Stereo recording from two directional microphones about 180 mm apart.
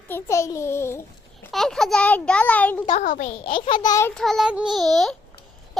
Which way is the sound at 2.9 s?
45° left (ahead or behind).